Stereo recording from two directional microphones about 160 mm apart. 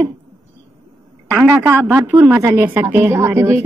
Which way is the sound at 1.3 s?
10° right (ahead or behind).